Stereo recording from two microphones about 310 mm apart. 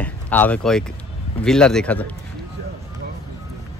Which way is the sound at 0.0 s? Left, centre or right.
Centre.